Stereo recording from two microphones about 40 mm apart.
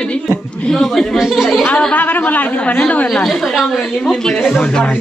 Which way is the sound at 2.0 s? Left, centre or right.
Left.